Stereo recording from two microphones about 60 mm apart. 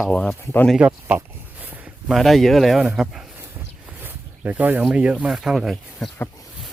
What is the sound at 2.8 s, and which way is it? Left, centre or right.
Speech, centre.